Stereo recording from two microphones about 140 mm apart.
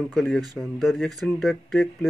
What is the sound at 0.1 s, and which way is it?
Speech, centre (ahead or behind).